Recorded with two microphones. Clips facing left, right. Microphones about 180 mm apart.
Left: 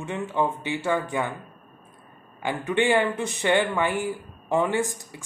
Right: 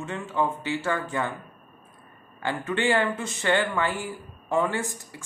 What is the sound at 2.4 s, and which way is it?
Speech, 15° left (ahead or behind).